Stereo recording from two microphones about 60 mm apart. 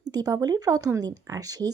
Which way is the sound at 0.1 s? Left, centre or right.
Right.